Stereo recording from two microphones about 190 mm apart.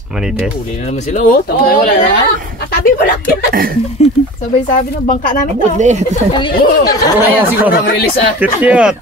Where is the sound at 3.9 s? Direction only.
35° left (ahead or behind).